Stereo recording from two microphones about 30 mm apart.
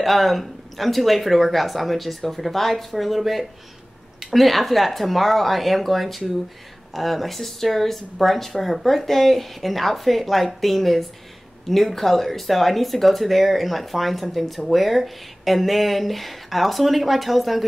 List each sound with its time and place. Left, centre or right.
0.0 s speech: centre